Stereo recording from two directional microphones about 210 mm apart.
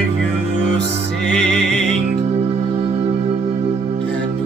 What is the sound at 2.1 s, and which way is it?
Music, 30° right (ahead or behind).